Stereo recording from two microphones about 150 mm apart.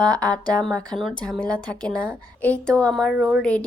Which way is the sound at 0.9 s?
Centre (ahead or behind).